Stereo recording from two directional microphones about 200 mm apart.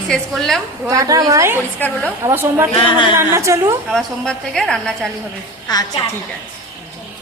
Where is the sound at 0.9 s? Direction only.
15° right (ahead or behind).